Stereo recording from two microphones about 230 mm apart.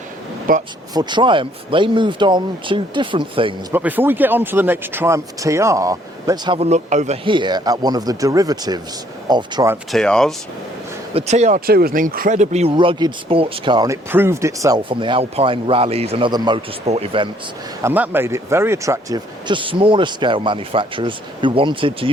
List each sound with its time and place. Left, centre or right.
0.5 s speech: right
0.9 s speech: centre
3.7 s speech: centre
9.9 s speech: centre
11.1 s speech: right
17.8 s speech: centre